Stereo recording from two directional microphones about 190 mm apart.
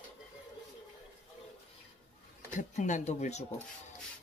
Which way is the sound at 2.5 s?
40° left (ahead or behind).